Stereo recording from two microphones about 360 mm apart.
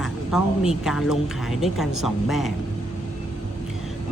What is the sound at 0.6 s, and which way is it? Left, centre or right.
Speech, centre.